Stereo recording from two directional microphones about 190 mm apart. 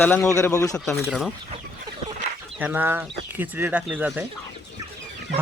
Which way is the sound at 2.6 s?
10° right (ahead or behind).